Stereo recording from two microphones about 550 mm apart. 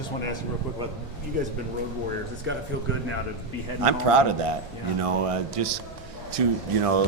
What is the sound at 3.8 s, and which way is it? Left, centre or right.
Speech, right.